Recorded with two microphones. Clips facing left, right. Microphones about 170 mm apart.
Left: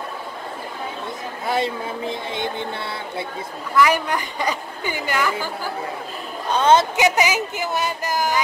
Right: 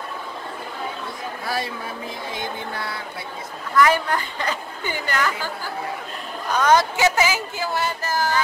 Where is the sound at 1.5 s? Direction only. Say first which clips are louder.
Left 6 dB; 25° left (ahead or behind).